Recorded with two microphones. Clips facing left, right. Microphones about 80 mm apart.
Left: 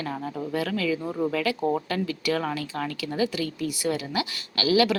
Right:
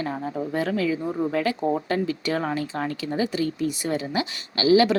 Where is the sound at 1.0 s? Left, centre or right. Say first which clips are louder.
Right 1 dB; centre.